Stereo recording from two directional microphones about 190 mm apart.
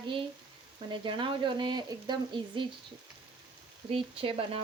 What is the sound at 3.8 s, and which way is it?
Speech, 30° right (ahead or behind).